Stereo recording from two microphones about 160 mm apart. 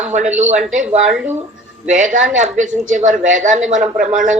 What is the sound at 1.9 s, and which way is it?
Speech, 50° right (ahead or behind).